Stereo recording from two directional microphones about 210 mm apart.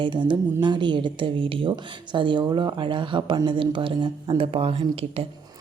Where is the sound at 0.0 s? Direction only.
20° right (ahead or behind).